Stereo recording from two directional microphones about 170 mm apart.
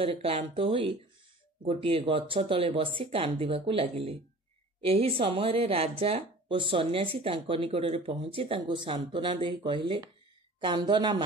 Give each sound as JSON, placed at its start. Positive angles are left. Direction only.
{"t": 0.0, "sound": "speech", "side_deg": -35}